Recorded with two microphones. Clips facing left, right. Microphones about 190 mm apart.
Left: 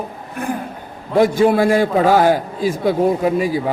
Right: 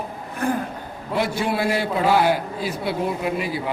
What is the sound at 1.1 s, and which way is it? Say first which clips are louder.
A man's voice: left 10 dB; 45° left (ahead or behind).